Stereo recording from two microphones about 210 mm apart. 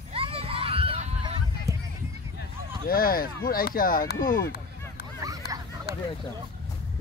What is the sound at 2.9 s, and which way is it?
Speech, 45° left (ahead or behind).